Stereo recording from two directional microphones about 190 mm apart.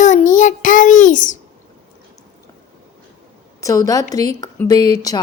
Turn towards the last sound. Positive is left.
turn(degrees=20)  # may be behind; listen again after turning